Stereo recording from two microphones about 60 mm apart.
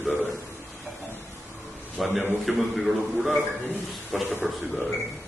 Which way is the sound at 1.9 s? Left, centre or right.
Centre.